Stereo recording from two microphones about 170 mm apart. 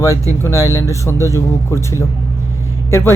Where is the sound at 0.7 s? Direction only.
20° left (ahead or behind).